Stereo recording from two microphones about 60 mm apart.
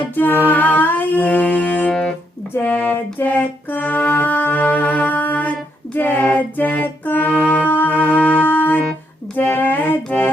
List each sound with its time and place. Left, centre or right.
0.0 s music: left
1.9 s music: centre
2.6 s music: left